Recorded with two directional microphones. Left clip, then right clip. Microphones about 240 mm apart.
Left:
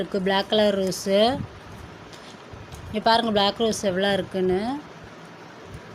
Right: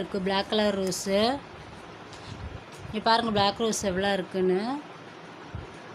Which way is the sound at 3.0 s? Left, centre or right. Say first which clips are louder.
Left 4 dB; centre.